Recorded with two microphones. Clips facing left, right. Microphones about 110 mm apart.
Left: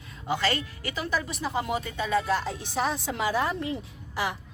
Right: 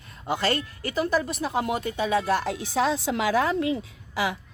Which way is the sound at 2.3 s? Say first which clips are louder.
Right 3 dB; 70° right (ahead or behind).